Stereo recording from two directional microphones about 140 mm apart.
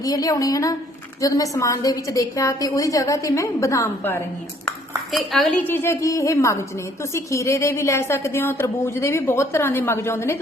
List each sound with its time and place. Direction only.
0.0 s a woman's voice: 25° left (ahead or behind)
5.1 s a woman's voice: centre (ahead or behind); by 10.3 s 20° left (ahead or behind)